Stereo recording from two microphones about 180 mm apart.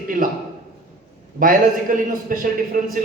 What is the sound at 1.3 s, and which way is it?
A man's voice, 50° right (ahead or behind).